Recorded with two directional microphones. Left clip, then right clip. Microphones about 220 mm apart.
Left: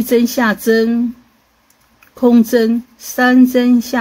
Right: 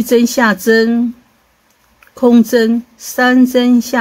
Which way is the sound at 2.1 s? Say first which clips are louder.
Right 2 dB; 5° right (ahead or behind).